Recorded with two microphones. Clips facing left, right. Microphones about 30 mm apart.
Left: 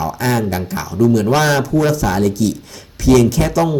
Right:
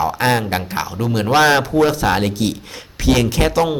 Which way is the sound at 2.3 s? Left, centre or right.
Right.